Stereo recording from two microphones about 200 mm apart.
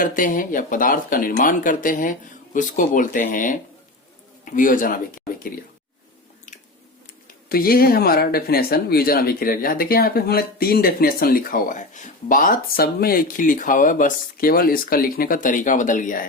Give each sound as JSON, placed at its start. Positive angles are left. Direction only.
{"t": 0.0, "sound": "speech", "side_deg": 40}
{"t": 7.5, "sound": "speech", "side_deg": 50}